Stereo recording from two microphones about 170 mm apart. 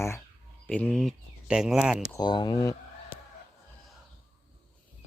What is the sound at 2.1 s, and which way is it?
Speech, 25° left (ahead or behind).